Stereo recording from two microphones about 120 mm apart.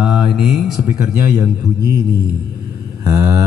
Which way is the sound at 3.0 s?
30° right (ahead or behind).